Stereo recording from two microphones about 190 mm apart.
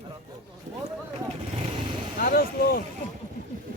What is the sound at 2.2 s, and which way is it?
Vehicle, 50° left (ahead or behind).